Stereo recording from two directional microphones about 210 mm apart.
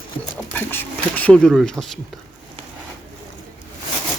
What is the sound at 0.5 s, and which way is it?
Speech, 10° left (ahead or behind).